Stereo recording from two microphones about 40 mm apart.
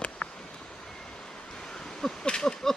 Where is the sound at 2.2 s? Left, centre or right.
Centre.